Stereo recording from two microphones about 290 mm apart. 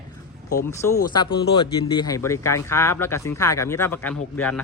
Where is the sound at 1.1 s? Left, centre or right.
Centre.